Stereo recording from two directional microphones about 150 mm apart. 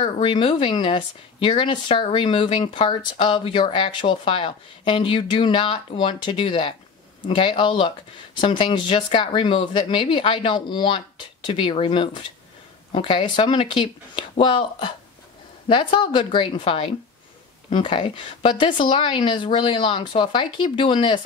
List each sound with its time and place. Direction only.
0.0 s speech: 35° left (ahead or behind)